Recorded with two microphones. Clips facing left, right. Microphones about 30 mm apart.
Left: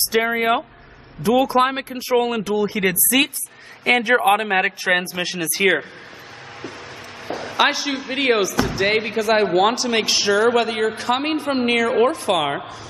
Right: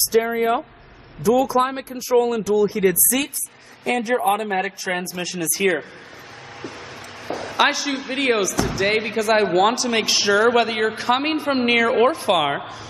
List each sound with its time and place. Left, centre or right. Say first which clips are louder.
0.1 s speech: right 1 dB; left
1.2 s speech: left 1 dB; left
2.1 s speech: right 2 dB; left
5.0 s speech: left 2 dB; left
7.2 s a sound: even; centre
8.1 s speech: left 2 dB; centre
8.4 s speech: left 2 dB; left
8.7 s speech: even; centre